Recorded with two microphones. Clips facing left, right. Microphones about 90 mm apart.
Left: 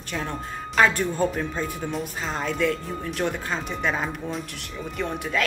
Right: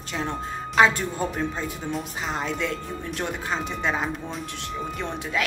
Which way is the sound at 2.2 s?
20° right (ahead or behind).